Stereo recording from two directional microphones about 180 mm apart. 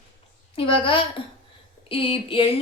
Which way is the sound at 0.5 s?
30° left (ahead or behind).